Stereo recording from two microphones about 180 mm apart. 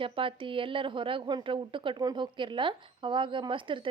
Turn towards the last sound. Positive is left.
turn(degrees=-25)  # may be behind; listen again after turning